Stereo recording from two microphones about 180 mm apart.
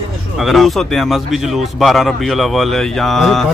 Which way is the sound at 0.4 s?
Centre (ahead or behind).